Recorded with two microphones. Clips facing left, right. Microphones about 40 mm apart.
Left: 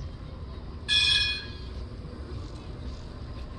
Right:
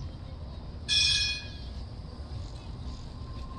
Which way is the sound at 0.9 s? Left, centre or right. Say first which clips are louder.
Left 4 dB; left.